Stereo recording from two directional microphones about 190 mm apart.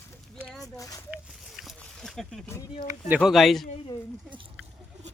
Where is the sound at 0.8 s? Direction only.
15° left (ahead or behind).